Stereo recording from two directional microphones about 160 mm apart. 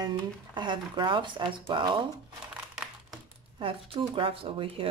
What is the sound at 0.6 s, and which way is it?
Speech, 30° right (ahead or behind).